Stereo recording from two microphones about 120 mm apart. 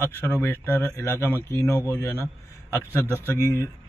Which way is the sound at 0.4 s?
20° left (ahead or behind).